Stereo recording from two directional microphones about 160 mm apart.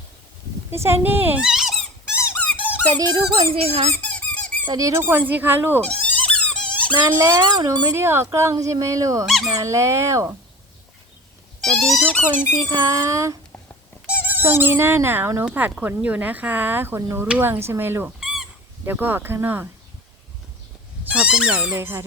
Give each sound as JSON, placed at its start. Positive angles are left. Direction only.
{"t": 0.7, "sound": "speech", "side_deg": -15}
{"t": 2.3, "sound": "squeak", "side_deg": 10}
{"t": 2.9, "sound": "speech", "side_deg": -25}
{"t": 3.3, "sound": "speech", "side_deg": -40}
{"t": 4.0, "sound": "squeak", "side_deg": 10}
{"t": 4.6, "sound": "speech", "side_deg": -25}
{"t": 5.8, "sound": "a sound", "side_deg": 5}
{"t": 7.3, "sound": "speech", "side_deg": -25}
{"t": 7.9, "sound": "speech", "side_deg": -15}
{"t": 9.2, "sound": "speech", "side_deg": 0}
{"t": 9.6, "sound": "speech", "side_deg": -20}
{"t": 11.6, "sound": "speech", "side_deg": 0}
{"t": 12.6, "sound": "speech", "side_deg": -20}
{"t": 21.0, "sound": "speech", "side_deg": -5}